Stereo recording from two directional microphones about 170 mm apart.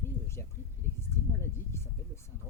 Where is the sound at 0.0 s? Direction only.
15° left (ahead or behind).